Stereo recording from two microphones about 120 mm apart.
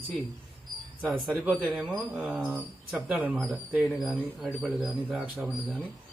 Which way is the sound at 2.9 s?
5° right (ahead or behind).